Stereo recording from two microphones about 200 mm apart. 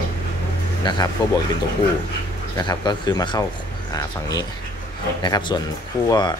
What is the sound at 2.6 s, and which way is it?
Speech, 20° left (ahead or behind).